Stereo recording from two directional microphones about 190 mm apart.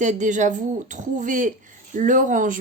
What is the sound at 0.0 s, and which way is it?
Speech, 40° right (ahead or behind).